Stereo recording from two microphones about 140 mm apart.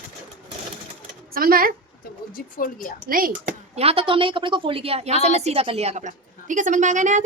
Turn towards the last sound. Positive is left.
turn(degrees=-60)  # may be behind; listen again after turning